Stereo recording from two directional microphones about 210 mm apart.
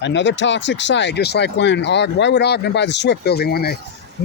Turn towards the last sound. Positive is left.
turn(degrees=50)  # may be behind; listen again after turning